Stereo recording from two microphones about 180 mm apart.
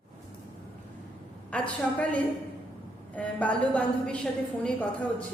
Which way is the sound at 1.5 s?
5° left (ahead or behind).